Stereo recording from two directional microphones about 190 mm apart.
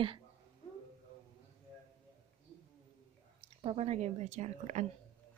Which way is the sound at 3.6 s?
30° right (ahead or behind).